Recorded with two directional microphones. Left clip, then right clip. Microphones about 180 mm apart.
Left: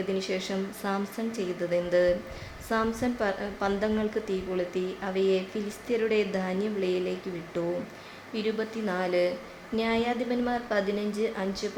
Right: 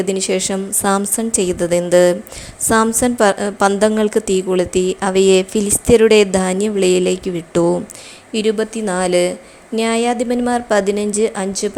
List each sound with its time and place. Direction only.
0.1 s speech: 45° right (ahead or behind)